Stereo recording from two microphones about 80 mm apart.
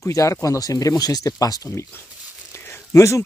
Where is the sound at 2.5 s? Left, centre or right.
Left.